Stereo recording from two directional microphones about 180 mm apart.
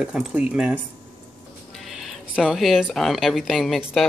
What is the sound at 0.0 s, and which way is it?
Speech, 5° right (ahead or behind).